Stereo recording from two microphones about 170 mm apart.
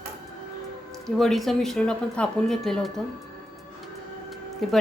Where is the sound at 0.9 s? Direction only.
Centre (ahead or behind).